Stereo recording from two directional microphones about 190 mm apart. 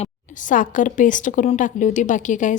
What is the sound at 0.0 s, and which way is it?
A woman's voice, 45° left (ahead or behind).